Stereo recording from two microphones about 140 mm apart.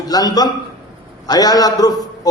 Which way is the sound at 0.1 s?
25° left (ahead or behind).